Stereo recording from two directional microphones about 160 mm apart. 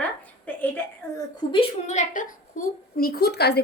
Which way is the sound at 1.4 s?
25° left (ahead or behind).